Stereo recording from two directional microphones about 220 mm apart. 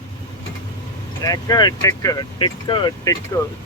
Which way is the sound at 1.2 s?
15° left (ahead or behind).